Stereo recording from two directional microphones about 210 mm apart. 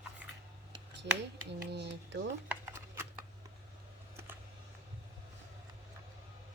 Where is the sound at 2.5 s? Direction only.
10° right (ahead or behind).